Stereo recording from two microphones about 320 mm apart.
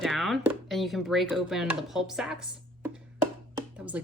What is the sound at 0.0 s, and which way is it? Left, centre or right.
Speech, centre.